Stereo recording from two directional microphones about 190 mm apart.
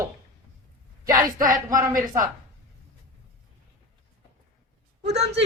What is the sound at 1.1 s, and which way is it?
Speech, 45° right (ahead or behind).